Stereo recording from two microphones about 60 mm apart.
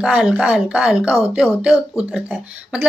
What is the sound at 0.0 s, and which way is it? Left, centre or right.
Speech, centre.